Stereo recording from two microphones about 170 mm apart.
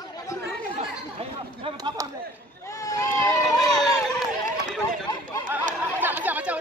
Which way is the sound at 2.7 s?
20° left (ahead or behind).